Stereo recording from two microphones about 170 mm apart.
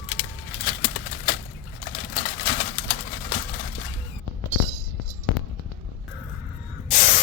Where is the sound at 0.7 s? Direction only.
90° left.